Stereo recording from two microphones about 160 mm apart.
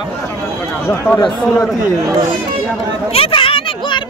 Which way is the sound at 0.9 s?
15° left (ahead or behind).